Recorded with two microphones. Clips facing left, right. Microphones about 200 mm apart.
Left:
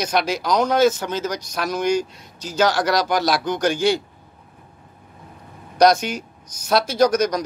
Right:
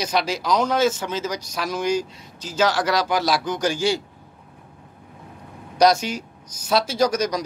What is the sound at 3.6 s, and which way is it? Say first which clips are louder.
Speech: left 5 dB; 60° left (ahead or behind).